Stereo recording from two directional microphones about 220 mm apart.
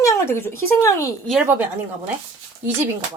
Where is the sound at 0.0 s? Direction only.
15° left (ahead or behind).